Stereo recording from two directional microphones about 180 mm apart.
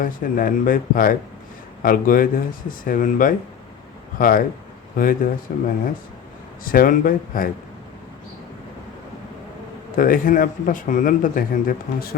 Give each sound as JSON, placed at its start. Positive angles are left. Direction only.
{"t": 0.0, "sound": "speech", "side_deg": 50}
{"t": 9.9, "sound": "speech", "side_deg": 50}